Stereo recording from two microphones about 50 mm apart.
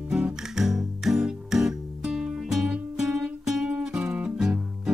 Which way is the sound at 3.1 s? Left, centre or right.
Centre.